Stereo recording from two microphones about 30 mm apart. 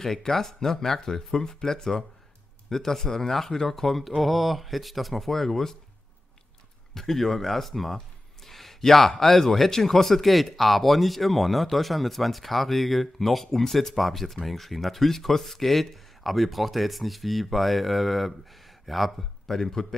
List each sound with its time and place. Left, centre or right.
0.0 s speech: centre
6.9 s speech: centre
8.5 s a sound: centre
9.1 s speech: centre